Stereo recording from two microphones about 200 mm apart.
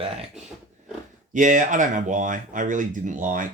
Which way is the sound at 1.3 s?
40° right (ahead or behind).